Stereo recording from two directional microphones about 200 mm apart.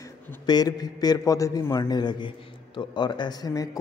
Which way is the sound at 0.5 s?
20° left (ahead or behind).